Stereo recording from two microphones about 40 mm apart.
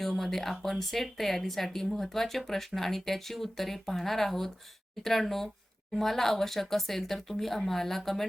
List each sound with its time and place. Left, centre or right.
0.0 s speech: centre